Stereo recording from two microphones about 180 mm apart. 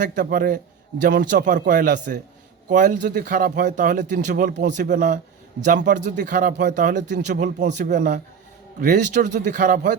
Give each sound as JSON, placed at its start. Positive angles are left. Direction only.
{"t": 0.0, "sound": "a man's voice", "side_deg": -50}
{"t": 1.6, "sound": "speech", "side_deg": -50}